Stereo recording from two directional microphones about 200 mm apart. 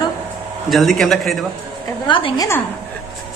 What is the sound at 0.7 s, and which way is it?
Speech, centre (ahead or behind).